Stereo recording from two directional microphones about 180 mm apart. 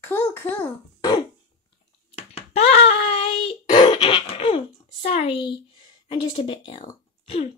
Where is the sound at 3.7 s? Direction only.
30° left (ahead or behind).